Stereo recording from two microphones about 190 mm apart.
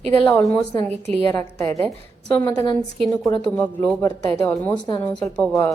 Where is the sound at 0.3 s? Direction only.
10° left (ahead or behind).